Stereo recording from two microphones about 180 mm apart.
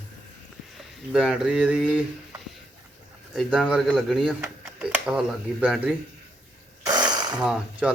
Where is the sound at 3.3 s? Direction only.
5° right (ahead or behind).